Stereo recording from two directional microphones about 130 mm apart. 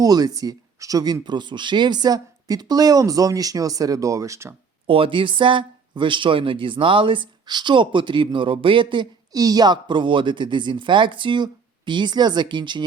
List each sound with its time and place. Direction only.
0.0 s speech: 30° right (ahead or behind)
4.9 s speech: 45° right (ahead or behind)